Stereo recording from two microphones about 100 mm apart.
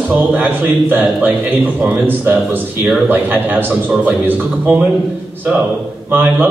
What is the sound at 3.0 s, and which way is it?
A man's voice, 20° right (ahead or behind).